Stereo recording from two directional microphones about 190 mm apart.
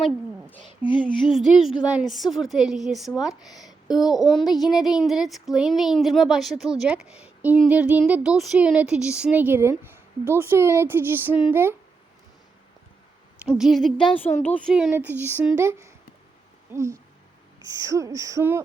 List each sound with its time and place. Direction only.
0.0 s a sound: 5° left (ahead or behind)
1.3 s speech: centre (ahead or behind)
4.4 s speech: 20° left (ahead or behind)
4.6 s speech: centre (ahead or behind)
13.5 s speech: centre (ahead or behind)